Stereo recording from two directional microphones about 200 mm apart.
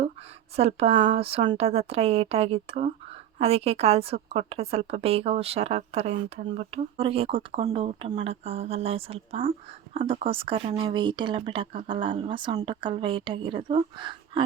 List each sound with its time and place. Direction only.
0.5 s a woman's voice: 30° right (ahead or behind)